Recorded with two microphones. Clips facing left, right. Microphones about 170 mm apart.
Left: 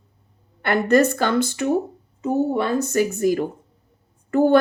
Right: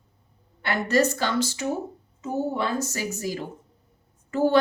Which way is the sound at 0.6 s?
55° left (ahead or behind).